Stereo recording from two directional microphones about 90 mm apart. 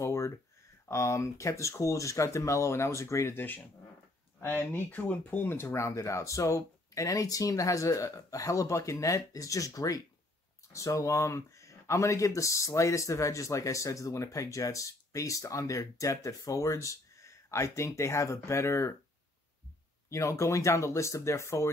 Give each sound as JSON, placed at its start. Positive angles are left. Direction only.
{"t": 0.0, "sound": "a sound", "side_deg": 35}
{"t": 0.8, "sound": "speech", "side_deg": 30}
{"t": 4.4, "sound": "speech", "side_deg": 20}
{"t": 20.1, "sound": "speech", "side_deg": 35}